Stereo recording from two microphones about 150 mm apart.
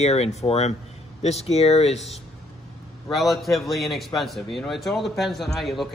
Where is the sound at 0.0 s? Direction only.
45° left (ahead or behind).